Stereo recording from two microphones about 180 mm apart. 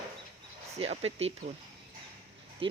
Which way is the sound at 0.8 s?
35° right (ahead or behind).